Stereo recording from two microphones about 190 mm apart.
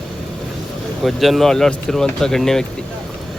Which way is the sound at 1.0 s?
Centre (ahead or behind).